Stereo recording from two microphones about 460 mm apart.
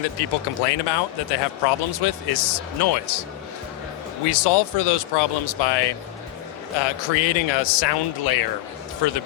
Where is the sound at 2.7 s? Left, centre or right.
Left.